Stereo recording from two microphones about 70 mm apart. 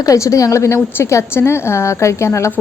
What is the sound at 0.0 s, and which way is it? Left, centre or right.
A woman's voice, left.